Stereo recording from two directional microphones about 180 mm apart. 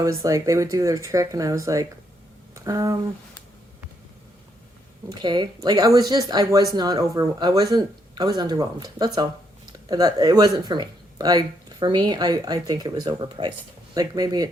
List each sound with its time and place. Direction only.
0.0 s speech: 20° right (ahead or behind)
5.0 s speech: 25° right (ahead or behind)